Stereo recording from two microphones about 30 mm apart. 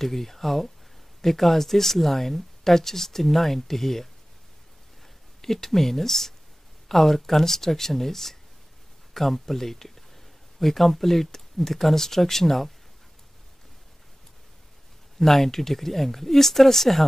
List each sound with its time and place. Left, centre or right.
0.0 s speech: centre
5.4 s speech: centre
15.1 s speech: centre